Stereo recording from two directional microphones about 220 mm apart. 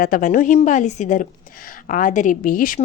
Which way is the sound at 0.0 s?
35° left (ahead or behind).